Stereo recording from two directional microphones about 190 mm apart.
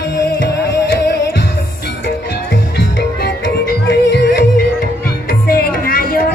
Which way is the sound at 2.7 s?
55° left (ahead or behind).